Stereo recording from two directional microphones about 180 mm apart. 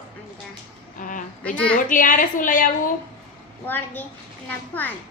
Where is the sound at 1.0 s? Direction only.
50° left (ahead or behind).